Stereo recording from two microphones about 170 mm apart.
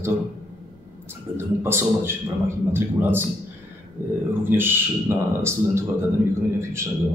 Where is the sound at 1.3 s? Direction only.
15° right (ahead or behind).